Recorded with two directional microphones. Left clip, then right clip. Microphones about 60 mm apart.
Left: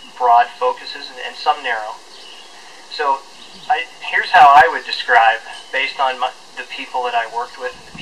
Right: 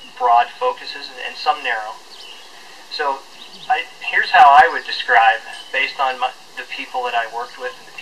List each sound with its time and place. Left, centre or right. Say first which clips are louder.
0.2 s speech: left 2 dB; centre
3.7 s speech: even; centre